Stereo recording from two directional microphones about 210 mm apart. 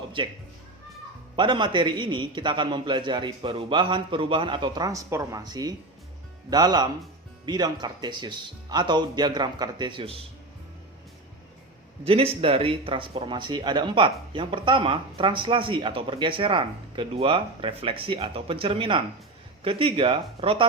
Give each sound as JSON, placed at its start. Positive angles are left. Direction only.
{"t": 0.2, "sound": "speech", "side_deg": -25}
{"t": 1.4, "sound": "speech", "side_deg": -20}
{"t": 12.0, "sound": "speech", "side_deg": -25}